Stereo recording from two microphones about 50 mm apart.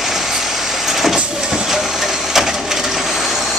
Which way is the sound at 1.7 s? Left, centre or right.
Centre.